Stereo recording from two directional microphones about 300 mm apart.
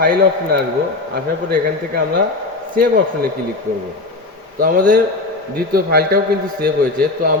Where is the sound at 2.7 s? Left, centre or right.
Right.